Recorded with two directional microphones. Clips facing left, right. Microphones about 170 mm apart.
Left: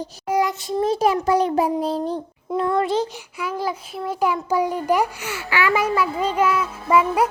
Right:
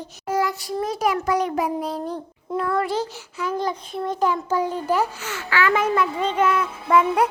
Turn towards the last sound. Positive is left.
turn(degrees=5)  # may be behind; listen again after turning